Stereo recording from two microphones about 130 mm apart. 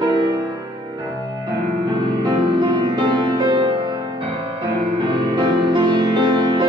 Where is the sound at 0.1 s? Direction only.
35° right (ahead or behind).